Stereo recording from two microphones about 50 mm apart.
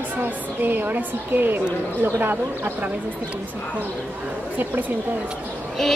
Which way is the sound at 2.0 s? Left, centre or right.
Right.